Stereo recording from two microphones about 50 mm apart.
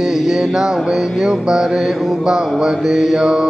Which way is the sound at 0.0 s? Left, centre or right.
Centre.